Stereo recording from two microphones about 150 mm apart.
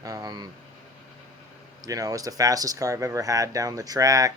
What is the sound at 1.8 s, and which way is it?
Speech, 25° right (ahead or behind).